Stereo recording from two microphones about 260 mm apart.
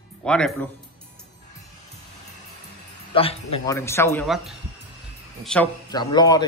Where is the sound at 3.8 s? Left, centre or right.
Centre.